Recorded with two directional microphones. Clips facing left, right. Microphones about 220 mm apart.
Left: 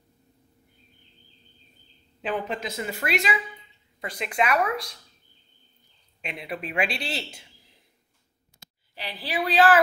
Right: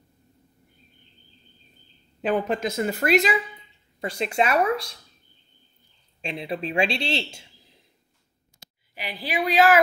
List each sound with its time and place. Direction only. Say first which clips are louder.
2.2 s a woman's voice: right 6 dB; 45° right (ahead or behind)
4.0 s speech: right 3 dB; 30° right (ahead or behind)
6.2 s speech: right 4 dB; 30° right (ahead or behind)
8.9 s a woman's voice: right 2 dB; 15° right (ahead or behind)